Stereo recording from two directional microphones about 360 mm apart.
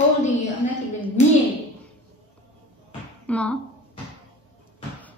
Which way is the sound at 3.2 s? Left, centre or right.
Centre.